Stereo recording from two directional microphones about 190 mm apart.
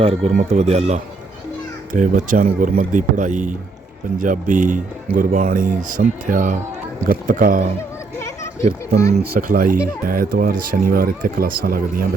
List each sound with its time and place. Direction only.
0.0 s speech: 30° right (ahead or behind)
9.1 s speech: 50° right (ahead or behind)